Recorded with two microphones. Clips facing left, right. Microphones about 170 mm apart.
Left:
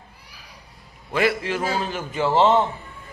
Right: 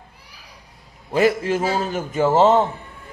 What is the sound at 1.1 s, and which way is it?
A man's voice, 45° right (ahead or behind).